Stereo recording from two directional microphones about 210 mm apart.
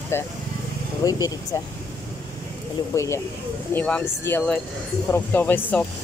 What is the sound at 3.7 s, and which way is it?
Speech, 5° left (ahead or behind).